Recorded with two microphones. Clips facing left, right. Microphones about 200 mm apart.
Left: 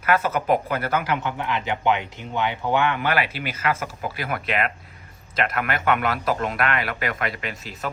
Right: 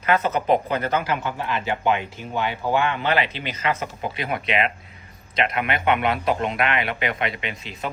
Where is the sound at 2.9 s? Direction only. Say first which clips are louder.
Right 1 dB; 20° right (ahead or behind).